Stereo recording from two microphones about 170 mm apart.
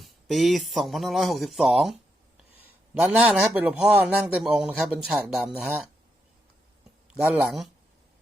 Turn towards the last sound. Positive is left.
turn(degrees=-5)  # may be behind; listen again after turning